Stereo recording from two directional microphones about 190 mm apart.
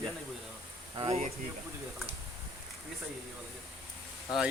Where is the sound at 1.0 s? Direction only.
30° right (ahead or behind).